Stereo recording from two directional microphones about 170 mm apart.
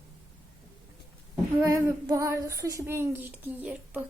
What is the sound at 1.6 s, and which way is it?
Speech, 20° right (ahead or behind).